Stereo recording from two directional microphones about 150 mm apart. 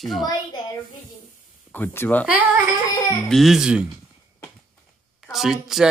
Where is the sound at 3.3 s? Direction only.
Centre (ahead or behind).